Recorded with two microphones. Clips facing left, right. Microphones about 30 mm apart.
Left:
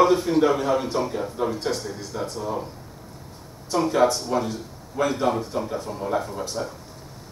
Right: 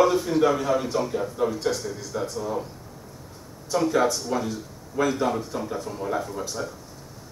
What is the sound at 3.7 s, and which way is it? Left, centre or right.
A man's voice, centre.